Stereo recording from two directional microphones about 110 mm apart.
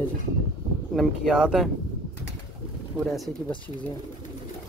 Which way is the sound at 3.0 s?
Centre (ahead or behind).